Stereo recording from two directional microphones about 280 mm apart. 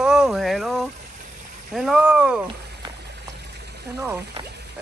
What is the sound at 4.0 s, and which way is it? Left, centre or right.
Speech, centre.